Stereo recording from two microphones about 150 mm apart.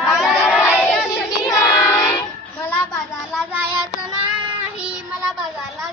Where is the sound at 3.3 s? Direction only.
10° right (ahead or behind).